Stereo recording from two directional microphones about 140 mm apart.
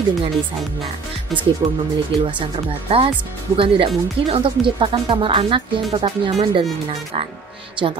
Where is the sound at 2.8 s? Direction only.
40° right (ahead or behind).